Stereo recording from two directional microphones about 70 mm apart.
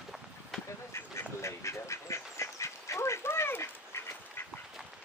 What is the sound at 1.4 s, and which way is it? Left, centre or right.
Duck, left.